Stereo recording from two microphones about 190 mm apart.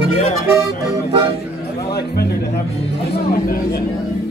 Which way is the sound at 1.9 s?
55° left (ahead or behind).